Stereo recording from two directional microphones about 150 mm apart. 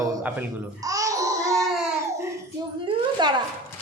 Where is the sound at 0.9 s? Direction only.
20° right (ahead or behind).